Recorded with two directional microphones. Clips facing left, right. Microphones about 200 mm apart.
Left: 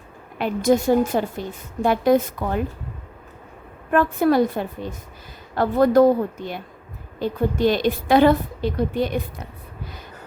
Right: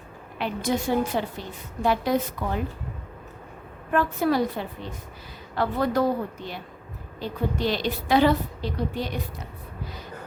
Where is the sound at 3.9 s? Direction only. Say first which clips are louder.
Left 5 dB; 55° left (ahead or behind).